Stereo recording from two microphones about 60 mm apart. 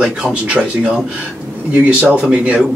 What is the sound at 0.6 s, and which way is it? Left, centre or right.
Speech, right.